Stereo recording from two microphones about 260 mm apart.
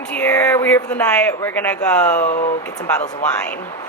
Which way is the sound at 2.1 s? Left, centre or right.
Left.